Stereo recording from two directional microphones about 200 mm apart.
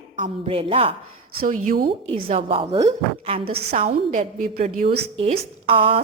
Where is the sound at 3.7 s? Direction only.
40° right (ahead or behind).